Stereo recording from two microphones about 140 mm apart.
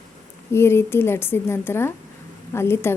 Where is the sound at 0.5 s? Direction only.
20° left (ahead or behind).